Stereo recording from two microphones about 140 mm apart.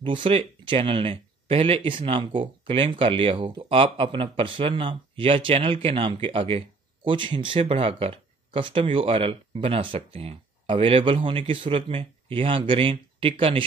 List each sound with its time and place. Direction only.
0.0 s speech: 40° right (ahead or behind)